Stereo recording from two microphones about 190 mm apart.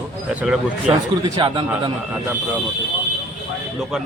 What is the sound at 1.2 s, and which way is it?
Speech, 25° right (ahead or behind).